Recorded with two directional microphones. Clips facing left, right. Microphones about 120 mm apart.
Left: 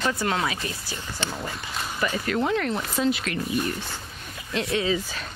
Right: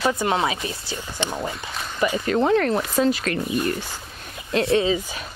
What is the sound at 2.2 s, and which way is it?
Speech, 30° right (ahead or behind).